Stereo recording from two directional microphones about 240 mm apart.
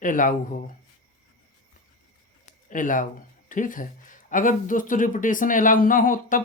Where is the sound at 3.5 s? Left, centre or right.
Left.